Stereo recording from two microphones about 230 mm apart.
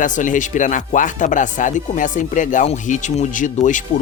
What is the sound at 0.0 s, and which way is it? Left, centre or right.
Speech, left.